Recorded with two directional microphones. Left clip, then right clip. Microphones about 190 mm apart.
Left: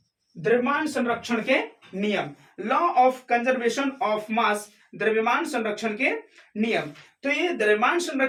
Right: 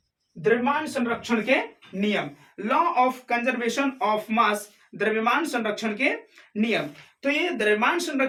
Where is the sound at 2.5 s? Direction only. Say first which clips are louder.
Left 1 dB; 25° right (ahead or behind).